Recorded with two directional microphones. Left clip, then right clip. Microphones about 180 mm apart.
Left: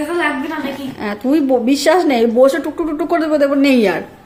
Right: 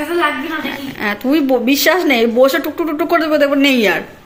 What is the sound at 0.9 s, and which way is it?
A woman's voice, 10° left (ahead or behind).